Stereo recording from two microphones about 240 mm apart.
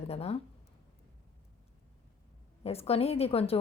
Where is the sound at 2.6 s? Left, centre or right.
Left.